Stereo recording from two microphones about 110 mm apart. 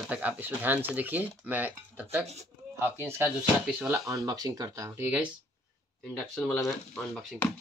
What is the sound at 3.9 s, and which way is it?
Speech, 30° right (ahead or behind).